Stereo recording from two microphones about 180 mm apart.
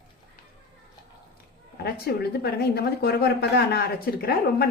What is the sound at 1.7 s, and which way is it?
Speech, 65° left (ahead or behind).